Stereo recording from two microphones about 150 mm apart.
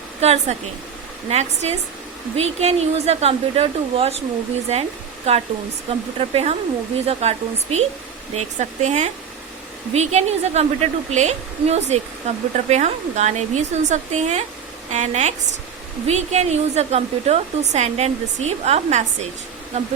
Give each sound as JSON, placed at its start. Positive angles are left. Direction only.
{"t": 0.2, "sound": "a woman's voice", "side_deg": -45}